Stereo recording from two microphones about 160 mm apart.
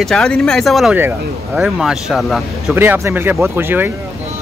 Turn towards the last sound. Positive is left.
turn(degrees=-15)  # may be behind; listen again after turning